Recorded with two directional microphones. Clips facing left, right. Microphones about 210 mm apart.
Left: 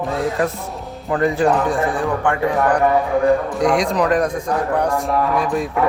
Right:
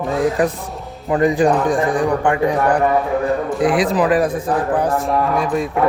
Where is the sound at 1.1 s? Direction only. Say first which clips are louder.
Right 2 dB; 15° right (ahead or behind).